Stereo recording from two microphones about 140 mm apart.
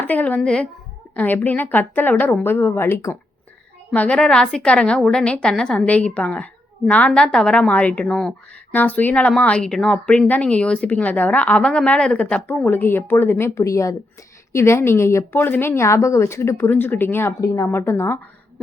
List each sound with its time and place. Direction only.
0.0 s a woman's voice: 10° left (ahead or behind)